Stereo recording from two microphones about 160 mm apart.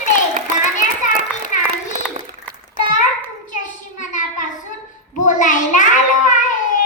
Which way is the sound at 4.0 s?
55° left (ahead or behind).